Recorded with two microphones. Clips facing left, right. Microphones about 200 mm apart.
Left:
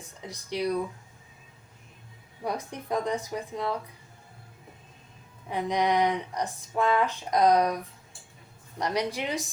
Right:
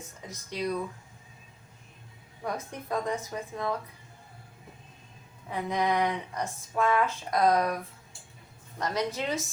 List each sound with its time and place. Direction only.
0.3 s speech: 15° left (ahead or behind)
2.4 s speech: 15° left (ahead or behind)
5.5 s speech: 15° left (ahead or behind)
8.8 s speech: 15° left (ahead or behind)